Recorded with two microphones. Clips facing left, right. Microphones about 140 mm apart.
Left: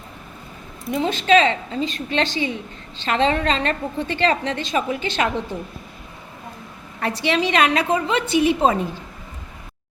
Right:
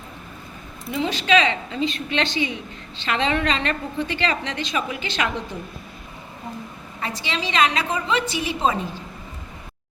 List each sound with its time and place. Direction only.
0.9 s a woman's voice: 45° left (ahead or behind)
7.0 s a woman's voice: 60° left (ahead or behind)